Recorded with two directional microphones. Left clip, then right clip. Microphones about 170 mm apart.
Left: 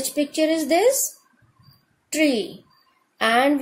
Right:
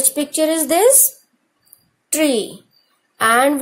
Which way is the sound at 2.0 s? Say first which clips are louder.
Right 4 dB; 15° right (ahead or behind).